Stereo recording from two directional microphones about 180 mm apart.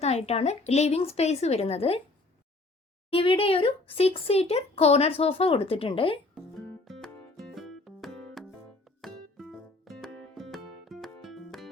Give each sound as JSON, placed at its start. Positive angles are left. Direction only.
{"t": 0.0, "sound": "a child's voice", "side_deg": 35}
{"t": 3.1, "sound": "a child's voice", "side_deg": 30}
{"t": 6.3, "sound": "music", "side_deg": 0}